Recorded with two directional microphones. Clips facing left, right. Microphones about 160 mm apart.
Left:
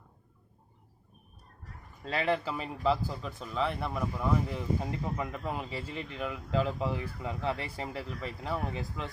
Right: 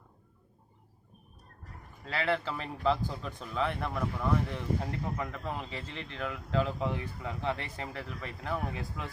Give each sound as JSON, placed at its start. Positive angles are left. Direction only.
{"t": 2.0, "sound": "speech", "side_deg": 20}